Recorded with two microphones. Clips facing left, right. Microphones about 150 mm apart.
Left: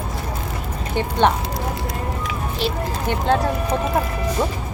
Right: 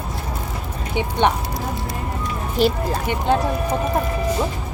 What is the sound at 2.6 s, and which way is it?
Speech, 45° right (ahead or behind).